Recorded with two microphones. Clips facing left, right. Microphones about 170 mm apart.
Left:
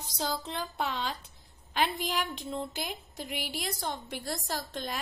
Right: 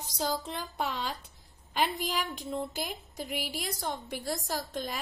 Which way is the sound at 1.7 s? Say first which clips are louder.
Even; 5° right (ahead or behind).